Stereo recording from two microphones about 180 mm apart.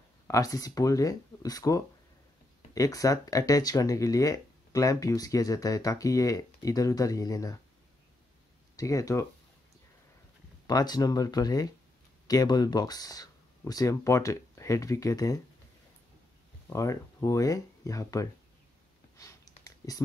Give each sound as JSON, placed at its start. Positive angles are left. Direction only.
{"t": 0.3, "sound": "speech", "side_deg": 20}
{"t": 8.7, "sound": "speech", "side_deg": 20}
{"t": 10.7, "sound": "speech", "side_deg": 20}
{"t": 16.6, "sound": "speech", "side_deg": 15}
{"t": 19.1, "sound": "a sound", "side_deg": 20}